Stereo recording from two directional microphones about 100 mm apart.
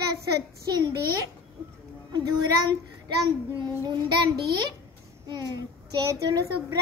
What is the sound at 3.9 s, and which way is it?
Child singing, 50° right (ahead or behind).